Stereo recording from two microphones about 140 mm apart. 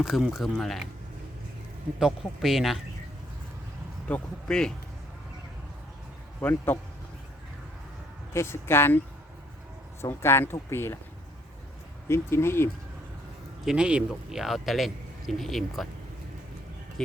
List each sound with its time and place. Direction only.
0.0 s a man's voice: 5° right (ahead or behind)
2.0 s a man's voice: centre (ahead or behind)
4.1 s a man's voice: 5° left (ahead or behind)
6.4 s speech: 15° left (ahead or behind)
8.3 s speech: 20° left (ahead or behind)
10.0 s speech: 20° left (ahead or behind)
12.0 s speech: 20° left (ahead or behind)
13.7 s a man's voice: 5° right (ahead or behind)